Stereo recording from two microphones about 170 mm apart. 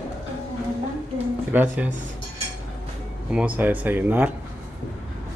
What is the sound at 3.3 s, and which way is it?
Speech, 5° right (ahead or behind).